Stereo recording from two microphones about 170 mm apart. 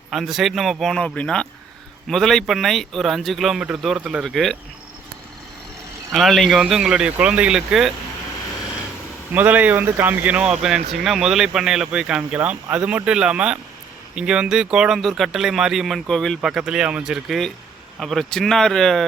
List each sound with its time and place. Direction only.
0.1 s speech: centre (ahead or behind)
6.1 s speech: centre (ahead or behind)
9.3 s speech: 10° right (ahead or behind)